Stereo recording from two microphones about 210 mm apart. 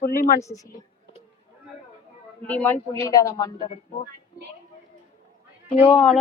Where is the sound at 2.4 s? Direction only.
10° left (ahead or behind).